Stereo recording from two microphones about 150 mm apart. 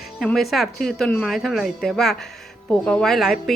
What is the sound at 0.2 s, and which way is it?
A woman's voice, centre (ahead or behind).